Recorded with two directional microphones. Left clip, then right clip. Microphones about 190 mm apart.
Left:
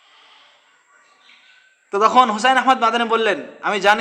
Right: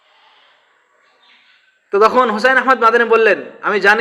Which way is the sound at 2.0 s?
5° left (ahead or behind).